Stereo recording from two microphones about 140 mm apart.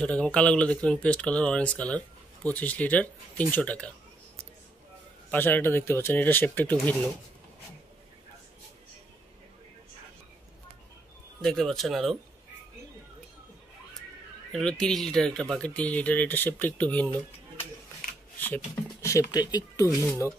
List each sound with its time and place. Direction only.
0.0 s speech: 10° left (ahead or behind)
5.3 s speech: 15° left (ahead or behind)
11.4 s speech: 5° left (ahead or behind)
14.5 s speech: 5° left (ahead or behind)
18.9 s speech: 20° left (ahead or behind)